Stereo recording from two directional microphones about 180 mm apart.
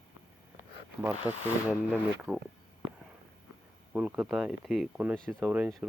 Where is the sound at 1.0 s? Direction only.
10° right (ahead or behind).